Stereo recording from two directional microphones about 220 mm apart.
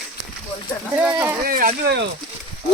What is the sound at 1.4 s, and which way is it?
Speech, 40° right (ahead or behind).